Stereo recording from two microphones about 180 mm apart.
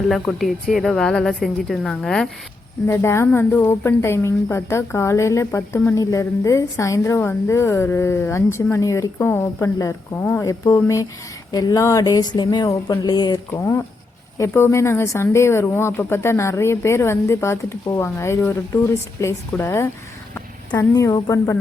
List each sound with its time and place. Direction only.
0.1 s a woman's voice: centre (ahead or behind)
2.8 s speech: 15° left (ahead or behind)